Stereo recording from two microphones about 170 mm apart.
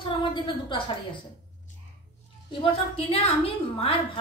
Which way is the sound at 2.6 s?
30° left (ahead or behind).